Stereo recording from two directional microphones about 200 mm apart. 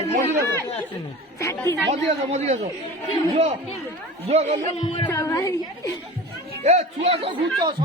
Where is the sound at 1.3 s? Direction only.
15° left (ahead or behind).